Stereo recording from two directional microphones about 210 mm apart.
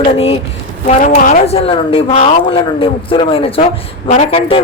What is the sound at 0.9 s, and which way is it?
A man's voice, 35° left (ahead or behind).